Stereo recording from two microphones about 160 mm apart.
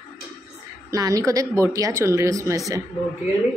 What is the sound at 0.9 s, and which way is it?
Speech, 20° right (ahead or behind).